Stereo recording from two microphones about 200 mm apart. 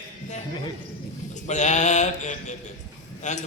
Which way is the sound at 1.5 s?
35° left (ahead or behind).